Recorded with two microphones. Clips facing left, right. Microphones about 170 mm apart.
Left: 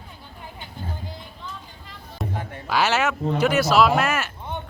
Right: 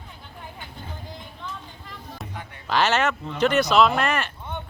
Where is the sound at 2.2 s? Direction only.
Centre (ahead or behind).